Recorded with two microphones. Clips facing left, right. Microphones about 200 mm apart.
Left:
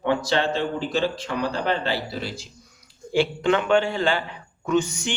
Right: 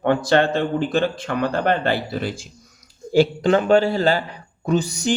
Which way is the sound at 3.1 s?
40° right (ahead or behind).